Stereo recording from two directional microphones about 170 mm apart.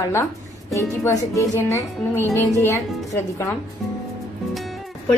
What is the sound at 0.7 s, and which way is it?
Speech, 15° left (ahead or behind).